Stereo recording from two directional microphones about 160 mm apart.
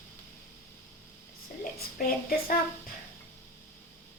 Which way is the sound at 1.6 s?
65° left (ahead or behind).